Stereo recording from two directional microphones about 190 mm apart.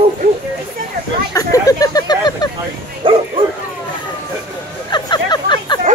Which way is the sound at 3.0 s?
30° right (ahead or behind).